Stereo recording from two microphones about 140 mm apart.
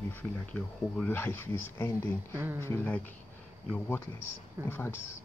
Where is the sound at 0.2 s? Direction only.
10° left (ahead or behind).